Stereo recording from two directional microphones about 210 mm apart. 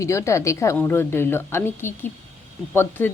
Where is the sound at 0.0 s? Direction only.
15° left (ahead or behind).